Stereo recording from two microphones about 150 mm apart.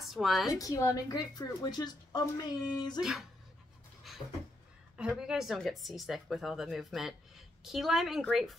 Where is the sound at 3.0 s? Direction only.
Centre (ahead or behind).